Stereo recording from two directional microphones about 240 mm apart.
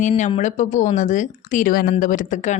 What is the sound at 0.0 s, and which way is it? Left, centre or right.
A woman's voice, left.